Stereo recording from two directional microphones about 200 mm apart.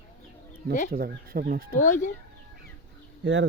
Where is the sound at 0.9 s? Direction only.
45° right (ahead or behind).